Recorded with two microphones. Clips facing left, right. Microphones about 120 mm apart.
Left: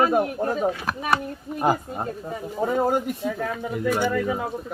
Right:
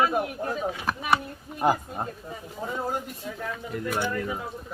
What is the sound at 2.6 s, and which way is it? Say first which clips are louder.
Speech: left 9 dB; 55° left (ahead or behind).